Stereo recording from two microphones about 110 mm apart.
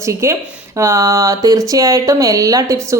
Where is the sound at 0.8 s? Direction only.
30° right (ahead or behind).